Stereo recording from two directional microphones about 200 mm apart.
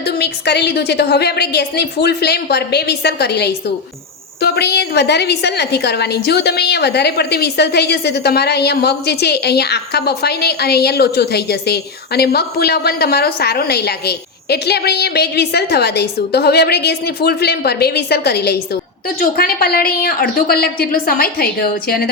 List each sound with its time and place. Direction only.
0.0 s a woman's voice: 55° left (ahead or behind)